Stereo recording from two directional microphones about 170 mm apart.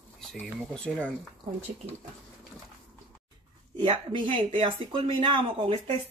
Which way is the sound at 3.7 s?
30° right (ahead or behind).